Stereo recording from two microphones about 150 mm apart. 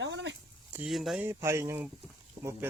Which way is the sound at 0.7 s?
Centre (ahead or behind).